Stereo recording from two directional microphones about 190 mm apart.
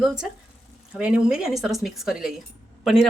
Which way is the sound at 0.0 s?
5° right (ahead or behind).